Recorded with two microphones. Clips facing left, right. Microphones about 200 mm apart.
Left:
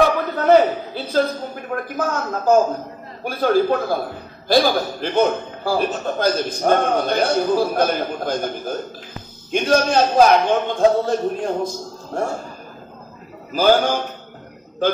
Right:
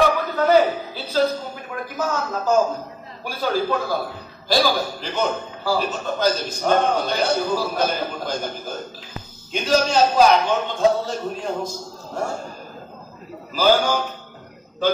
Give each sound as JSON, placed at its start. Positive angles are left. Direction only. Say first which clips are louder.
{"t": 0.4, "sound": "a sound", "louder": "left 3 dB", "side_deg": 55}
{"t": 3.3, "sound": "a man's voice", "louder": "left 6 dB", "side_deg": 55}
{"t": 13.5, "sound": "a man's voice", "louder": "left 2 dB", "side_deg": 55}